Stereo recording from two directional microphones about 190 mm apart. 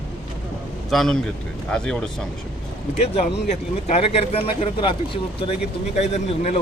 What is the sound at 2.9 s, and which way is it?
Speech, 35° left (ahead or behind).